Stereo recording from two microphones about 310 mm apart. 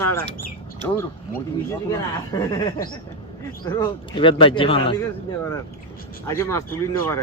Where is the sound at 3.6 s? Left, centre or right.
Centre.